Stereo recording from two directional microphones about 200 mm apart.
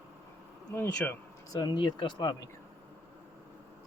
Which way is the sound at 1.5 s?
20° left (ahead or behind).